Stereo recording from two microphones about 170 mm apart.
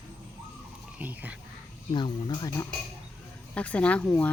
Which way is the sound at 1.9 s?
25° left (ahead or behind).